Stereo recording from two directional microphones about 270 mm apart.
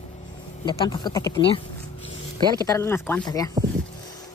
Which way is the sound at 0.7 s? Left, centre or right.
Centre.